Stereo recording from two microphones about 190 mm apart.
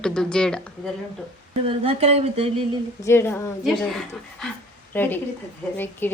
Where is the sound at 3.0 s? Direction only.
15° left (ahead or behind).